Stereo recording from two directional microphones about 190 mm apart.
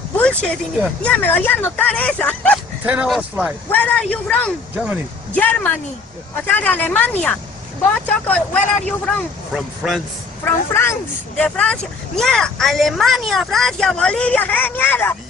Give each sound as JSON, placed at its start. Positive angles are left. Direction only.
{"t": 0.2, "sound": "a sound", "side_deg": 5}
{"t": 1.0, "sound": "speech", "side_deg": 10}
{"t": 2.8, "sound": "speech", "side_deg": -5}
{"t": 3.7, "sound": "speech", "side_deg": 5}
{"t": 10.4, "sound": "speech", "side_deg": 10}